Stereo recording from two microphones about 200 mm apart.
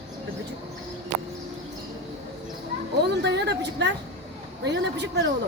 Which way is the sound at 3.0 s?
55° right (ahead or behind).